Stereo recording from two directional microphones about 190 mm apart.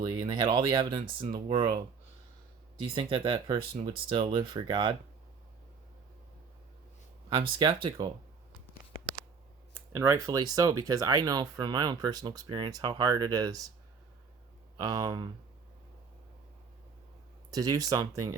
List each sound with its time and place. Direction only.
0.0 s speech: 25° right (ahead or behind)
2.9 s speech: 25° right (ahead or behind)
7.3 s speech: 25° right (ahead or behind)
9.9 s speech: 15° right (ahead or behind)
14.8 s speech: 20° right (ahead or behind)
17.5 s speech: 20° right (ahead or behind)